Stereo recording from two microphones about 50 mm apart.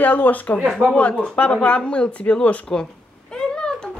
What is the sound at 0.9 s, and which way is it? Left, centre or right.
A woman's voice, left.